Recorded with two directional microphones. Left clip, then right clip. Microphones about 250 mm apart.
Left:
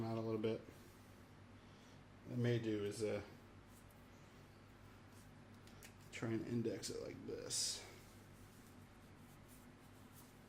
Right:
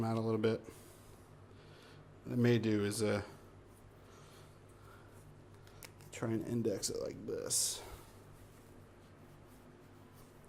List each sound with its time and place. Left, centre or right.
0.0 s a sound: right
2.4 s speech: right
6.1 s speech: centre